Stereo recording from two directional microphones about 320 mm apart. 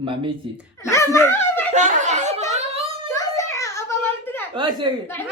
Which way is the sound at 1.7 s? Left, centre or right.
Right.